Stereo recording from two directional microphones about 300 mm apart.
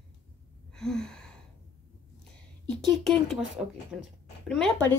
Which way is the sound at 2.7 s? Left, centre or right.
Centre.